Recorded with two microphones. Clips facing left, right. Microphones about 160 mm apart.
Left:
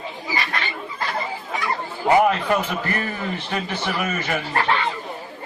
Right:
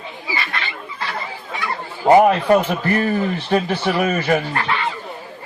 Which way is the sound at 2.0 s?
40° right (ahead or behind).